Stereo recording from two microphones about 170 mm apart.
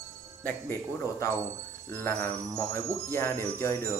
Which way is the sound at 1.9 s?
15° left (ahead or behind).